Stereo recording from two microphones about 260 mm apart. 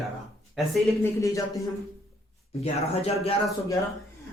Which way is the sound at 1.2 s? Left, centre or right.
Centre.